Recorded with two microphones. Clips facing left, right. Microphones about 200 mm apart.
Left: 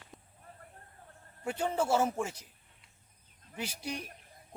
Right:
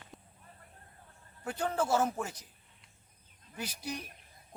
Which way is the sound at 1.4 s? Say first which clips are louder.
Left 1 dB; 10° left (ahead or behind).